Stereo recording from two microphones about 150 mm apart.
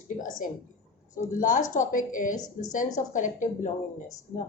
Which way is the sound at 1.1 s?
60° left (ahead or behind).